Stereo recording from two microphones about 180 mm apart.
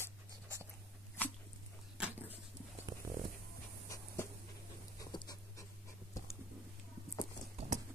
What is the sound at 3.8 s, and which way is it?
Dog, 20° left (ahead or behind).